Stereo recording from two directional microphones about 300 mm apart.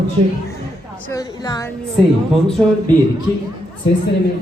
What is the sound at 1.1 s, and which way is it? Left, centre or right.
Speech, centre.